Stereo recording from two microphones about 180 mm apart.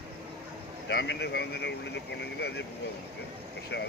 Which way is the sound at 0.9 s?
75° left (ahead or behind).